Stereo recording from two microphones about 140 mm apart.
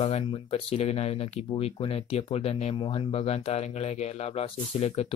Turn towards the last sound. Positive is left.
turn(degrees=50)  # may be behind; listen again after turning